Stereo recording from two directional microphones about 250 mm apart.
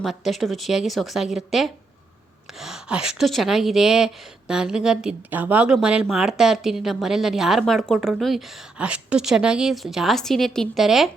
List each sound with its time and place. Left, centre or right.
0.0 s speech: centre